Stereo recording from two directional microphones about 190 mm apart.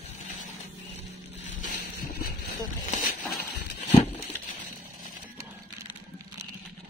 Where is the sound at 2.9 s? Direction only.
50° left (ahead or behind).